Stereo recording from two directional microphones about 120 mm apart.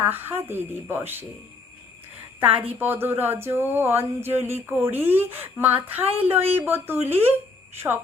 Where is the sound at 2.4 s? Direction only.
15° right (ahead or behind).